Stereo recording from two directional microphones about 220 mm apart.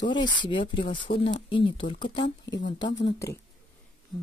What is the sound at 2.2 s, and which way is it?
Speech, 55° left (ahead or behind).